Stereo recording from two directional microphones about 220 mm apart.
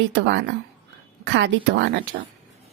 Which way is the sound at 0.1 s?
55° right (ahead or behind).